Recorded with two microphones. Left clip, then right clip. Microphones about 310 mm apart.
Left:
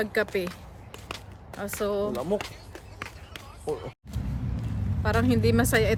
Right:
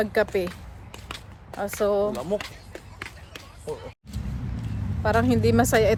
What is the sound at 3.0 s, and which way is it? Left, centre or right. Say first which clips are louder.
Basketball bounce: even; centre.